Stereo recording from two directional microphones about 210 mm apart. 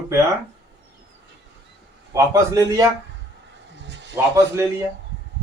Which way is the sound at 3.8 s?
55° right (ahead or behind).